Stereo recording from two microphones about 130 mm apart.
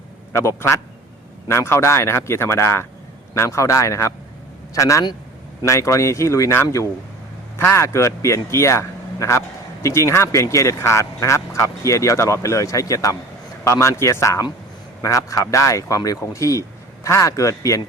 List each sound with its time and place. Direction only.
0.3 s speech: 20° left (ahead or behind)